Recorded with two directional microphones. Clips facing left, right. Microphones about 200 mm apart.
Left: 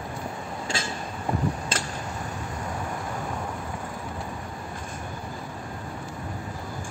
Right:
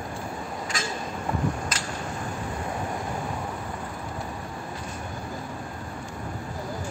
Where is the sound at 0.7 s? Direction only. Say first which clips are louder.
Even; 30° left (ahead or behind).